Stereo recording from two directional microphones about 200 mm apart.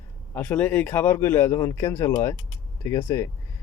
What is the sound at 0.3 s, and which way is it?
Speech, 5° left (ahead or behind).